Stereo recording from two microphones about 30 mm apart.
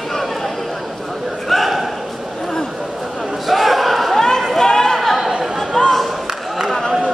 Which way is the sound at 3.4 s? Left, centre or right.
Centre.